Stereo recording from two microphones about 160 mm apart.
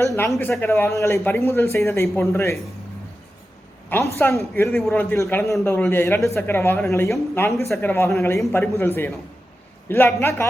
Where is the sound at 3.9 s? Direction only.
15° left (ahead or behind).